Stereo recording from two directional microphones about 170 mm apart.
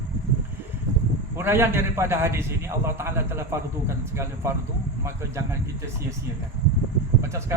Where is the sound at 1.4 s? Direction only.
15° right (ahead or behind).